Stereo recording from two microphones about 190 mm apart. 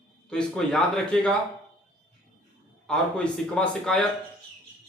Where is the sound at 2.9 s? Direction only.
5° left (ahead or behind).